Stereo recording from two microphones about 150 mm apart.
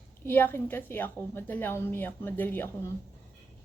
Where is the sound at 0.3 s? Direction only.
15° left (ahead or behind).